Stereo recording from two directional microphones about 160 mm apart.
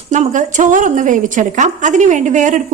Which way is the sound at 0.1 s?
50° right (ahead or behind).